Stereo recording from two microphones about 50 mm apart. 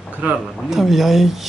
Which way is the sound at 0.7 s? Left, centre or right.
Centre.